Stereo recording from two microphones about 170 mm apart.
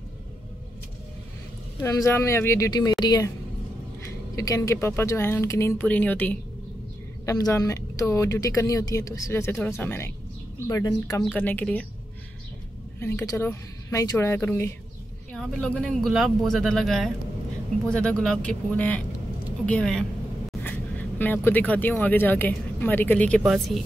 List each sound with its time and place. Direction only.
1.8 s speech: 20° left (ahead or behind)
7.2 s speech: 20° left (ahead or behind)
11.3 s speech: 10° left (ahead or behind)
13.0 s speech: 15° left (ahead or behind)
23.4 s speech: 5° right (ahead or behind)